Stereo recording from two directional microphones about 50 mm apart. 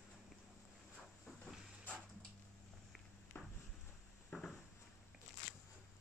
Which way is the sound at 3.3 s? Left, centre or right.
Left.